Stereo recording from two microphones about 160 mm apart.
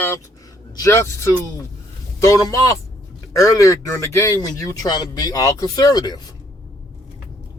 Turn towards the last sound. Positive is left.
turn(degrees=25)  # may be behind; listen again after turning